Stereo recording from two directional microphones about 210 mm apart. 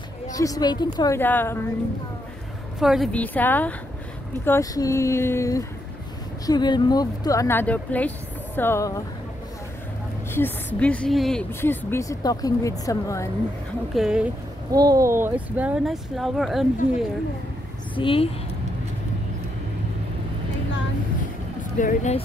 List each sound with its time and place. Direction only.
0.3 s a woman's voice: 15° left (ahead or behind)
2.8 s a woman's voice: centre (ahead or behind)
10.3 s a woman's voice: 10° left (ahead or behind)
13.9 s speech: 5° right (ahead or behind)
14.7 s speech: 15° right (ahead or behind); by 17.0 s centre (ahead or behind)
17.9 s a woman's voice: 25° left (ahead or behind)
21.7 s speech: 35° left (ahead or behind)